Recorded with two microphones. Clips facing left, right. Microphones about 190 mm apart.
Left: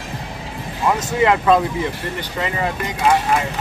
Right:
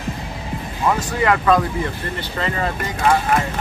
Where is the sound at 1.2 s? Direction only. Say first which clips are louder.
Left 2 dB; 20° left (ahead or behind).